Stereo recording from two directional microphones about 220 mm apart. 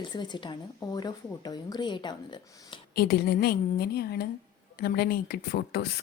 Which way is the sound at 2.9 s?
45° left (ahead or behind).